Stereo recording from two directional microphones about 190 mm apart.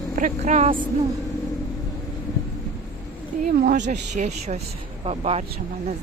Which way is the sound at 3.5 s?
45° right (ahead or behind).